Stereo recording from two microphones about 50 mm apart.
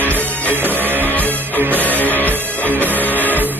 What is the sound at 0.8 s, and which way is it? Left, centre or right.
Music, right.